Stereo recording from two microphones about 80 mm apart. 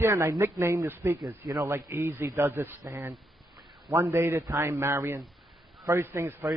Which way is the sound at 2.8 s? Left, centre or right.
Right.